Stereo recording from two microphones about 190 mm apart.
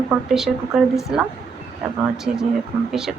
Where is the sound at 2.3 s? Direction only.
45° right (ahead or behind).